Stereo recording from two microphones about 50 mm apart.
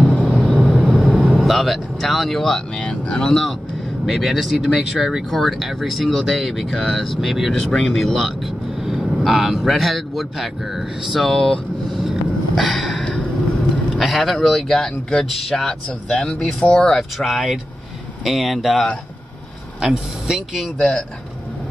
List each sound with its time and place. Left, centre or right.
0.0 s vehicle: left
0.4 s vehicle: right
0.7 s vehicle: centre
1.4 s speech: centre
2.8 s speech: centre
4.0 s a man's voice: centre
12.0 s a sound: centre
13.9 s a man's voice: centre
20.7 s speech: centre